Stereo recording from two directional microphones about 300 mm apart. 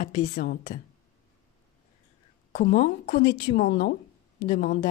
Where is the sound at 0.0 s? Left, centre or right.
Left.